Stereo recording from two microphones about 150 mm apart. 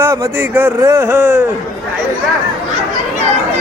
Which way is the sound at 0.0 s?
15° right (ahead or behind).